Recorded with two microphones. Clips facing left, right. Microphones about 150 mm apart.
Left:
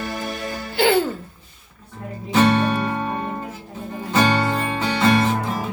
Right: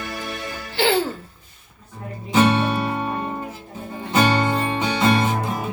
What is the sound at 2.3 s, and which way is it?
Music, 10° right (ahead or behind).